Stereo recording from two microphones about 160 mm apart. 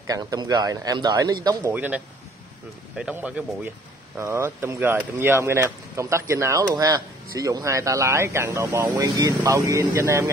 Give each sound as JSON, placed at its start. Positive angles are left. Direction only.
{"t": 0.0, "sound": "speech", "side_deg": -20}
{"t": 1.7, "sound": "speech", "side_deg": -10}